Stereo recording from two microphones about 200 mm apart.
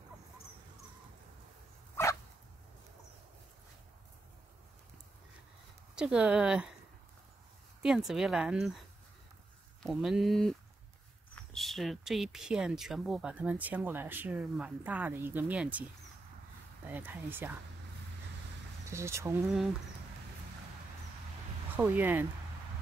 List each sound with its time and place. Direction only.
2.0 s dog: 10° left (ahead or behind)
5.9 s speech: 5° right (ahead or behind)
7.8 s speech: 5° right (ahead or behind)
9.8 s speech: centre (ahead or behind)
16.8 s speech: 10° right (ahead or behind)
18.9 s speech: 15° right (ahead or behind)
21.7 s speech: 10° right (ahead or behind)